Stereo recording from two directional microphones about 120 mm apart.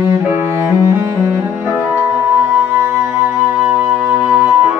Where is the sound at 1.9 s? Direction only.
15° right (ahead or behind).